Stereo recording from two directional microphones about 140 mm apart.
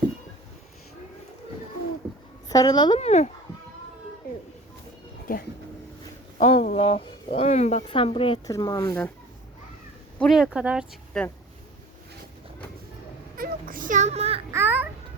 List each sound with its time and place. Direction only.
2.5 s a woman's voice: 25° left (ahead or behind)
3.0 s speech: 55° left (ahead or behind)
5.3 s speech: 90° left
6.4 s speech: 50° left (ahead or behind)
7.9 s speech: 40° left (ahead or behind)
8.4 s a woman's voice: 25° left (ahead or behind)
10.2 s speech: centre (ahead or behind)
11.1 s speech: 5° left (ahead or behind)
13.3 s a sound: 85° right; by 14.4 s 45° right (ahead or behind)
14.5 s a child's voice: 15° right (ahead or behind)